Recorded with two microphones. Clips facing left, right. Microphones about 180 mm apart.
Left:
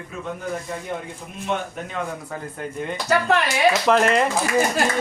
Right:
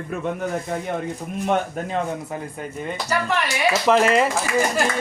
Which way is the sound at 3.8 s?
Centre (ahead or behind).